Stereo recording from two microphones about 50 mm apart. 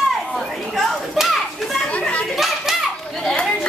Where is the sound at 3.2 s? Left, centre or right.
Centre.